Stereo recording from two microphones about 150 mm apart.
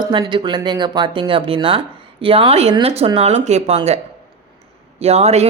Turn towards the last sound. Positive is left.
turn(degrees=-45)  # may be behind; listen again after turning